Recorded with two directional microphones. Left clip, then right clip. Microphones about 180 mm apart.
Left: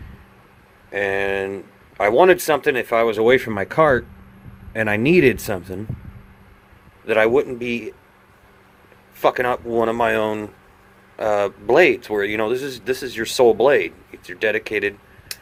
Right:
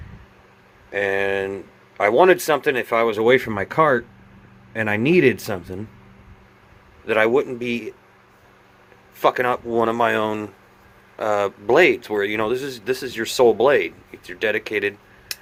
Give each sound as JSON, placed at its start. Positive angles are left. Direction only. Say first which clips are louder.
{"t": 0.9, "sound": "speech", "louder": "even", "side_deg": 10}
{"t": 7.0, "sound": "speech", "louder": "left 1 dB", "side_deg": 15}
{"t": 9.1, "sound": "speech", "louder": "even", "side_deg": 10}
{"t": 15.3, "sound": "a sound", "louder": "right 2 dB", "side_deg": 0}